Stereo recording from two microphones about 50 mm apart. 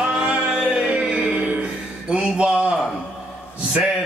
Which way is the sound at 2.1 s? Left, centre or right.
Centre.